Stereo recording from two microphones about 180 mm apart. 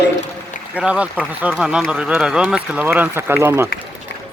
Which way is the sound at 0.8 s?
5° right (ahead or behind).